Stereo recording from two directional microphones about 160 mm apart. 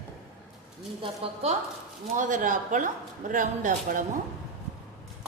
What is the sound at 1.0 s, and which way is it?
Speech, 35° right (ahead or behind).